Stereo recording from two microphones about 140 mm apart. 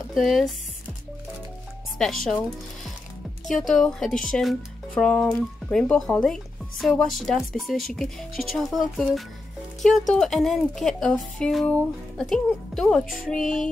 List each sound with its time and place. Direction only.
0.1 s speech: centre (ahead or behind)
2.0 s speech: centre (ahead or behind)
3.4 s speech: centre (ahead or behind)